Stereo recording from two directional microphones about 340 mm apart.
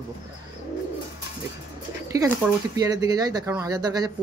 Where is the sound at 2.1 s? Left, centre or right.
Centre.